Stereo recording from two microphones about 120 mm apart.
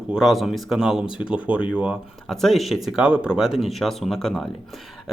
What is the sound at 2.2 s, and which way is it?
Speech, centre (ahead or behind).